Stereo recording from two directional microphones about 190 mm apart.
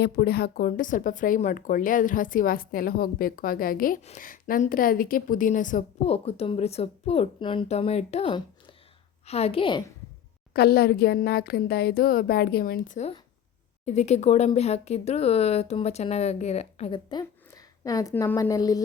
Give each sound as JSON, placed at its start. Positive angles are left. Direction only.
{"t": 0.0, "sound": "a woman's voice", "side_deg": 60}
{"t": 10.5, "sound": "a woman's voice", "side_deg": 55}